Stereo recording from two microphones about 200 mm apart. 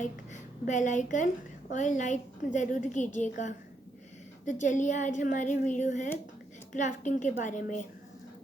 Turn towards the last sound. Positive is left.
turn(degrees=40)  # may be behind; listen again after turning